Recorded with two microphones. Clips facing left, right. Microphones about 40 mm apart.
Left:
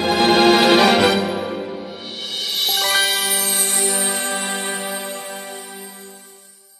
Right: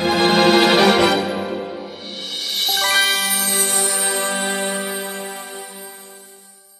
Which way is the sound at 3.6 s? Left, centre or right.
Right.